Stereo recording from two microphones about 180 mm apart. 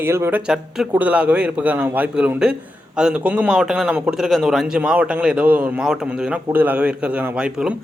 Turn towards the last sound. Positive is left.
turn(degrees=-5)  # may be behind; listen again after turning